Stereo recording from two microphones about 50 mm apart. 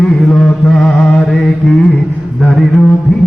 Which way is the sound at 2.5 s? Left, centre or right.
Centre.